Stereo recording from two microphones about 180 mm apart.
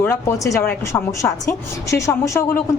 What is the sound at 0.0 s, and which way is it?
A woman's voice, 15° left (ahead or behind).